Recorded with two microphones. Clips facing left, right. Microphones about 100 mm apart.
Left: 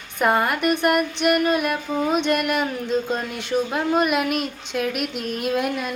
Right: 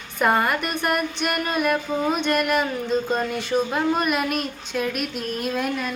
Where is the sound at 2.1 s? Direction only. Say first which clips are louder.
Left 1 dB; 15° left (ahead or behind).